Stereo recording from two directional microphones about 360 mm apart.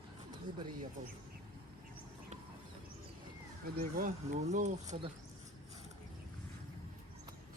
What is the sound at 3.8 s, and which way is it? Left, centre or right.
Speech, right.